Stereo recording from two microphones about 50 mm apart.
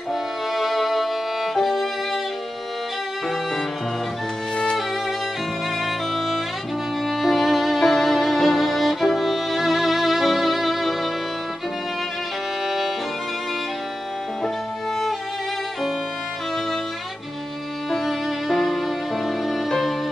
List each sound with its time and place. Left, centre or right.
0.1 s violin: centre
5.9 s music: centre
12.6 s music: centre
17.9 s music: centre